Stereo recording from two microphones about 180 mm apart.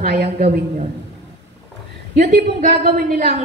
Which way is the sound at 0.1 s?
65° right (ahead or behind).